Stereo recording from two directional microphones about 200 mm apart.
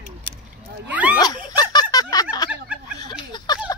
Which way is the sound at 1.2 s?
20° left (ahead or behind).